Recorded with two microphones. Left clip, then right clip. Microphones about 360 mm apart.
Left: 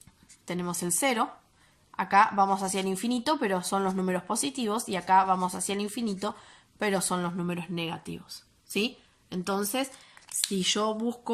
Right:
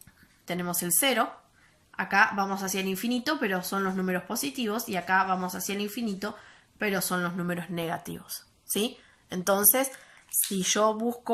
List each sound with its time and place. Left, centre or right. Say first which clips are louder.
0.4 s a woman's voice: right 1 dB; centre
9.3 s speech: right 5 dB; centre